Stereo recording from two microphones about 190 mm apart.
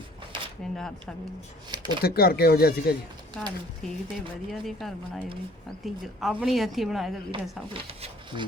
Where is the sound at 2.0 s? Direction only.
55° left (ahead or behind).